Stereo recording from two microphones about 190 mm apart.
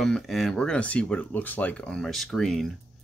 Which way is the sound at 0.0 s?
Centre (ahead or behind).